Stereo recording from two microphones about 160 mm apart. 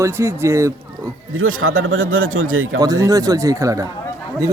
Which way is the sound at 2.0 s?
60° right (ahead or behind).